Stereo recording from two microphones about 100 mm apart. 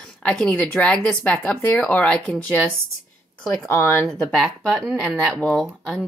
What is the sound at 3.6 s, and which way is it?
Speech, 25° left (ahead or behind).